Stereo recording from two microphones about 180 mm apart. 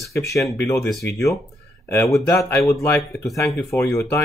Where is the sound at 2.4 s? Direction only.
15° left (ahead or behind).